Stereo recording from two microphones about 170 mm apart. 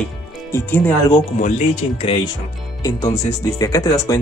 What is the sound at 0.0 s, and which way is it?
Music, 10° left (ahead or behind).